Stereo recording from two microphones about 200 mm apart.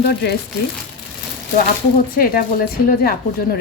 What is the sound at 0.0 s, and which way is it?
Speech, 50° left (ahead or behind).